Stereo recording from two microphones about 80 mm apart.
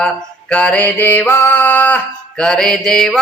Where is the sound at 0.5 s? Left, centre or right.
Centre.